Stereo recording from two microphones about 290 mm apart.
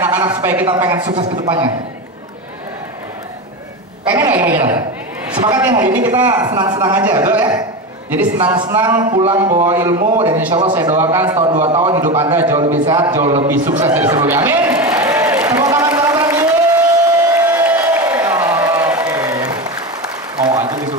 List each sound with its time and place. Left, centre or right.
0.0 s speech: centre
4.1 s speech: centre
9.9 s a man's voice: right
10.3 s a man's voice: centre
13.9 s a sound: centre